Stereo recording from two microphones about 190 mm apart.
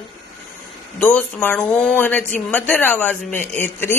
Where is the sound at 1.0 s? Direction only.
5° left (ahead or behind).